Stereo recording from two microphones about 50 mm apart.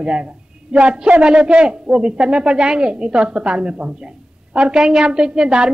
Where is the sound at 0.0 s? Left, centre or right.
Centre.